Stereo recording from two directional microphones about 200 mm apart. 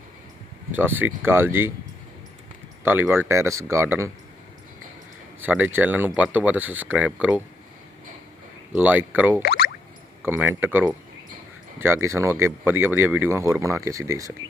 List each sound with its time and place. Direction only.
0.7 s speech: 10° right (ahead or behind)
2.8 s speech: 10° right (ahead or behind)
5.4 s speech: 10° right (ahead or behind)
8.7 s speech: 10° right (ahead or behind)
9.4 s a sound: 50° left (ahead or behind)
10.2 s speech: 10° right (ahead or behind)